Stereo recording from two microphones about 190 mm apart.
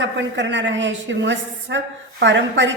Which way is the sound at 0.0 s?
70° right (ahead or behind).